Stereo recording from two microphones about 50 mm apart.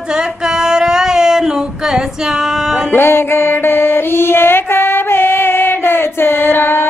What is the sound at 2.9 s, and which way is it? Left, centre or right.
Music, left.